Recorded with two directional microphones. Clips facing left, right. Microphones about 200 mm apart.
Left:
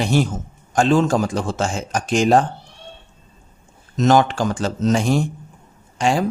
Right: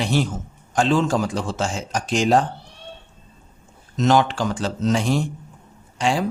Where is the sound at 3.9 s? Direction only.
45° left (ahead or behind).